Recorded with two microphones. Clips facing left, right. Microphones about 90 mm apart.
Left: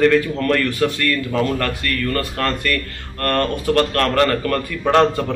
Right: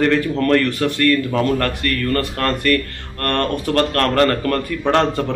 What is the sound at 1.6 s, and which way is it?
Speech, 45° right (ahead or behind).